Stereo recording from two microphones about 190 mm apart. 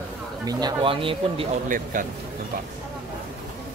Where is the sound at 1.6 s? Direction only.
45° right (ahead or behind).